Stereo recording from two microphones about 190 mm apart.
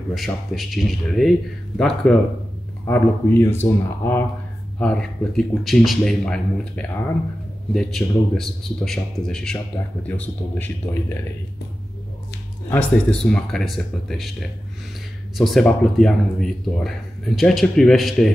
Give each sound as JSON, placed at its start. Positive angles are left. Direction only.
{"t": 0.1, "sound": "a man's voice", "side_deg": 0}
{"t": 12.6, "sound": "a man's voice", "side_deg": 5}
{"t": 15.3, "sound": "a man's voice", "side_deg": 0}